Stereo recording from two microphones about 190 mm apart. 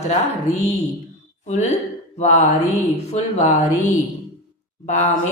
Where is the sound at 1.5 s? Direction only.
35° left (ahead or behind).